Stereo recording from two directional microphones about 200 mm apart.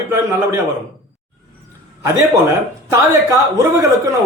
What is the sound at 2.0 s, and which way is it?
Speech, 15° right (ahead or behind).